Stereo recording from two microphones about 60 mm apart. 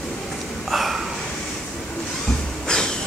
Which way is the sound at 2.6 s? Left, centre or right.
Centre.